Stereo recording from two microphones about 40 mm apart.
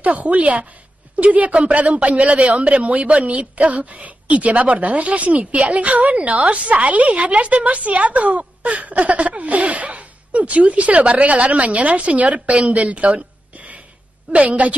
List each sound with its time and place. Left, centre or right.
0.0 s a woman's voice: right
2.3 s a woman's voice: right